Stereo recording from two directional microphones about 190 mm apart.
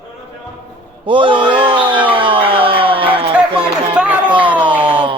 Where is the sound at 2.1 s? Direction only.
25° right (ahead or behind).